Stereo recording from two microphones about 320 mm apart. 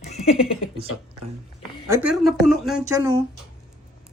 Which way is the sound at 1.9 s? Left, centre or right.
Centre.